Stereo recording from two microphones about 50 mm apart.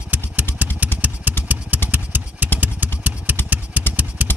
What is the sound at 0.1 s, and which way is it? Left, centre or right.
Motorcycle, right.